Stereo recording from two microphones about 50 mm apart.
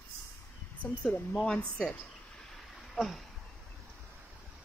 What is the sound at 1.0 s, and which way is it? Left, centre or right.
Speech, centre.